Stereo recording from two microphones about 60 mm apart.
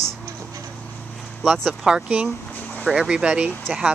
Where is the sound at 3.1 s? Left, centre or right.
Centre.